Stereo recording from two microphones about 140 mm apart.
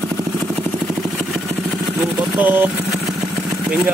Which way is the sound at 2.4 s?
15° right (ahead or behind).